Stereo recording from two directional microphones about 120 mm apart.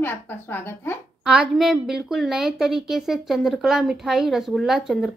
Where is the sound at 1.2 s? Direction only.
5° right (ahead or behind).